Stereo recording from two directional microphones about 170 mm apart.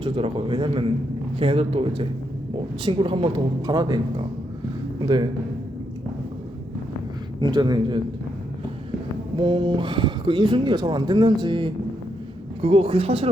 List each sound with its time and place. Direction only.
0.0 s speech: 30° right (ahead or behind)
7.4 s speech: 25° right (ahead or behind)
9.3 s speech: 25° right (ahead or behind)